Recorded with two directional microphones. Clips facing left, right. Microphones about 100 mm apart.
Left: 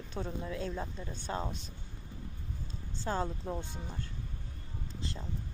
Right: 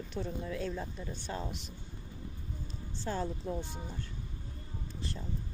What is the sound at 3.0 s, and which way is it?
Speech, 45° left (ahead or behind).